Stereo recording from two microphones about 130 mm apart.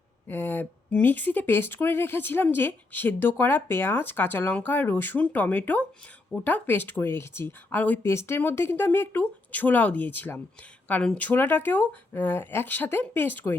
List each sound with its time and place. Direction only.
0.3 s speech: 15° left (ahead or behind)